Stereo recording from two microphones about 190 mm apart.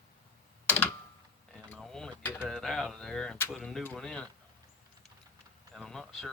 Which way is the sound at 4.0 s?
5° left (ahead or behind).